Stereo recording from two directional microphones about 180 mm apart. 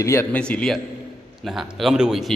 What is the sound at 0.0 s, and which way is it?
A man's voice, 15° left (ahead or behind).